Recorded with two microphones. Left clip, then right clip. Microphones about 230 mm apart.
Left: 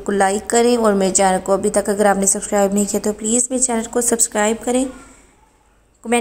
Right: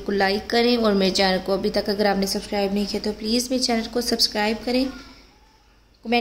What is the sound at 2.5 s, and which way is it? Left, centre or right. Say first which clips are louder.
Speech: left 9 dB; left.